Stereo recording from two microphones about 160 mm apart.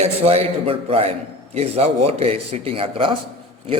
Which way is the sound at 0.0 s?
45° right (ahead or behind).